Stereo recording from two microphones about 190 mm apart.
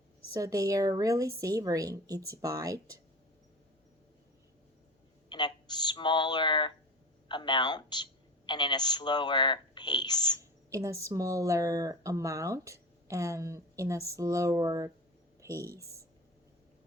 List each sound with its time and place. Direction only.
0.3 s speech: 20° right (ahead or behind)
5.3 s a woman's voice: 25° left (ahead or behind)
10.7 s speech: 15° right (ahead or behind)